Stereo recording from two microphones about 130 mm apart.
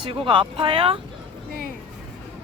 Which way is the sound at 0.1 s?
40° right (ahead or behind).